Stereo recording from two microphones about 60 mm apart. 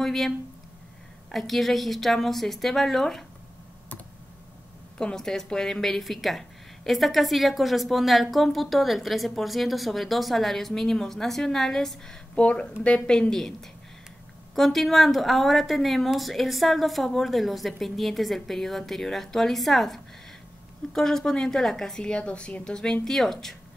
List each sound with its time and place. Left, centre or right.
0.0 s speech: centre
1.3 s a woman's voice: centre
4.9 s a woman's voice: centre
12.4 s speech: centre
13.3 s a woman's voice: centre